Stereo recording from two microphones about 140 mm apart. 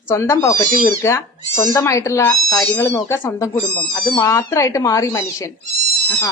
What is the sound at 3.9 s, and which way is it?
Speech, 30° left (ahead or behind).